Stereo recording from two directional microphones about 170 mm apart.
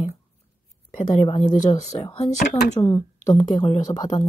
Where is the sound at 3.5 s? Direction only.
30° left (ahead or behind).